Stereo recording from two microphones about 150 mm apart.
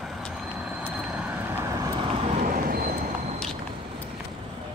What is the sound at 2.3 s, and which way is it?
Vehicle, 70° right (ahead or behind).